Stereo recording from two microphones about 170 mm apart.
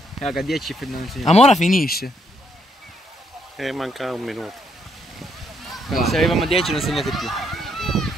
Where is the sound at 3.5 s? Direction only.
Centre (ahead or behind).